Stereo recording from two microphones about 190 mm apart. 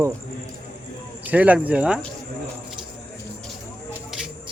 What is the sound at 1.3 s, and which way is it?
Speech, 5° right (ahead or behind).